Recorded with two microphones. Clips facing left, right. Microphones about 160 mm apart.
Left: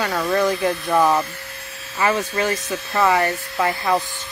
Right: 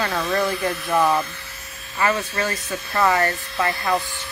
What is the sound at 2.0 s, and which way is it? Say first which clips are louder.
Speech: left 2 dB; 15° left (ahead or behind).